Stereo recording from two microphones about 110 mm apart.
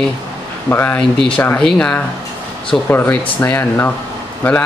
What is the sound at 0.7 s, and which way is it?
Speech, 15° left (ahead or behind).